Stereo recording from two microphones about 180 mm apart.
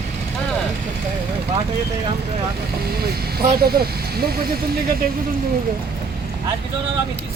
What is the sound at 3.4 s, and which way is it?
Speech, 60° right (ahead or behind).